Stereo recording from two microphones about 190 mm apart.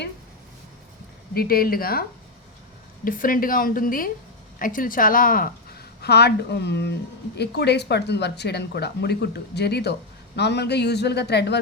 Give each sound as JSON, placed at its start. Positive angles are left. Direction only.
{"t": 1.3, "sound": "a woman's voice", "side_deg": 50}